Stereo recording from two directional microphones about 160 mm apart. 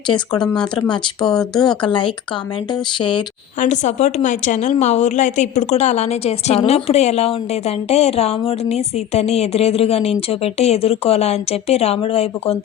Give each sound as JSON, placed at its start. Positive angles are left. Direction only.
{"t": 0.4, "sound": "speech", "side_deg": 5}
{"t": 1.6, "sound": "speech", "side_deg": 30}
{"t": 3.6, "sound": "a woman's voice", "side_deg": 50}